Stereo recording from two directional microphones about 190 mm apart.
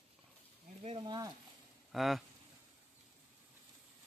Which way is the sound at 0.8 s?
25° right (ahead or behind).